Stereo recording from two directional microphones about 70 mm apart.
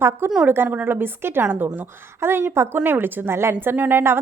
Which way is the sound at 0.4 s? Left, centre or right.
Right.